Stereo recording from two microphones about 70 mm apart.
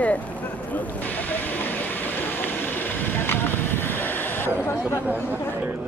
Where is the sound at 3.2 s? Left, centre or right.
Left.